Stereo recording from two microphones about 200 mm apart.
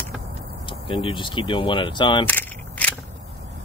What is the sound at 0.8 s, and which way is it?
Speech, 25° left (ahead or behind).